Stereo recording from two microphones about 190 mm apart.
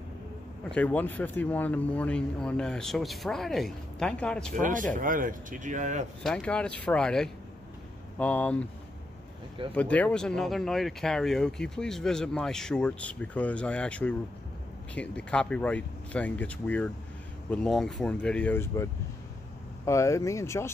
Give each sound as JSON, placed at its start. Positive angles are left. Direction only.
{"t": 0.7, "sound": "speech", "side_deg": 5}
{"t": 4.5, "sound": "speech", "side_deg": -45}
{"t": 6.2, "sound": "speech", "side_deg": 5}
{"t": 9.8, "sound": "speech", "side_deg": 5}